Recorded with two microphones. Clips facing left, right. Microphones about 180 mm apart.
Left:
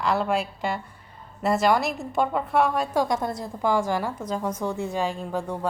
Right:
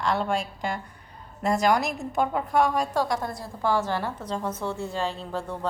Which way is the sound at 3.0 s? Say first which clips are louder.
Left 2 dB; 20° left (ahead or behind).